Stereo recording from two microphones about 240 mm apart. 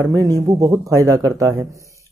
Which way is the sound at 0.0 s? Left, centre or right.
Centre.